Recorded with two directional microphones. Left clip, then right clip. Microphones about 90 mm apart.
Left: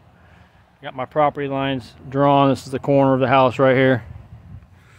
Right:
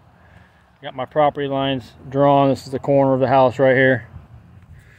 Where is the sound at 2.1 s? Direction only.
25° left (ahead or behind).